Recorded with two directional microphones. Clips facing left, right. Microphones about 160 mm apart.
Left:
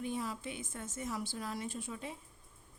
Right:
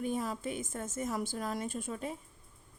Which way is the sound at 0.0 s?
45° right (ahead or behind).